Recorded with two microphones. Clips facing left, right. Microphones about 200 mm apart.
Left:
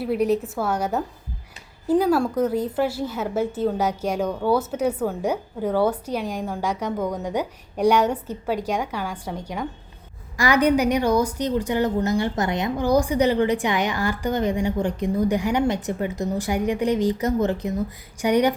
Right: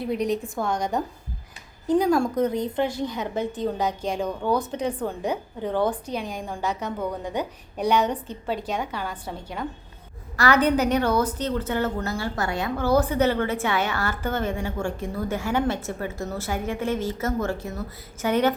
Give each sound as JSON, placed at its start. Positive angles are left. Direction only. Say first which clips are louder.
{"t": 0.0, "sound": "a woman's voice", "louder": "left 4 dB", "side_deg": 5}